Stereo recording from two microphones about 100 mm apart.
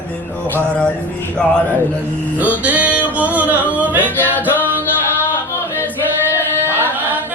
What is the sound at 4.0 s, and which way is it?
Music, 20° left (ahead or behind).